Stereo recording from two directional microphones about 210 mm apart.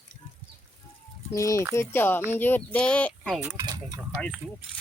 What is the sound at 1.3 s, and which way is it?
Speech, 15° left (ahead or behind).